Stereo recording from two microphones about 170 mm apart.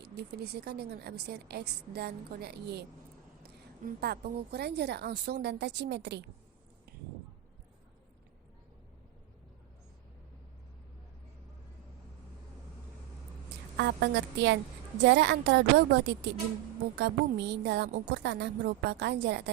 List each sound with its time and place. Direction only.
0.0 s a woman's voice: 80° right
13.7 s a woman's voice: 90° right